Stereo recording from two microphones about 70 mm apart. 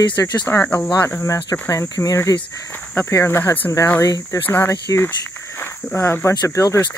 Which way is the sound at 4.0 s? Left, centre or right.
Left.